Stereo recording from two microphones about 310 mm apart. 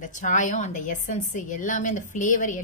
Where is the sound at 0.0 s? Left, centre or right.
Left.